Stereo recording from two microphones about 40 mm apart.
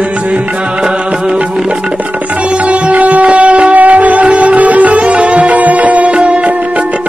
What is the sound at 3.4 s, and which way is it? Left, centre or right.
Music, right.